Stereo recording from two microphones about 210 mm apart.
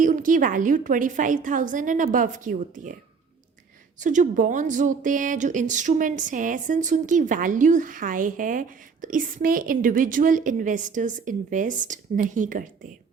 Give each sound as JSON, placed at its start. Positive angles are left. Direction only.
{"t": 0.0, "sound": "speech", "side_deg": -40}
{"t": 4.0, "sound": "speech", "side_deg": -35}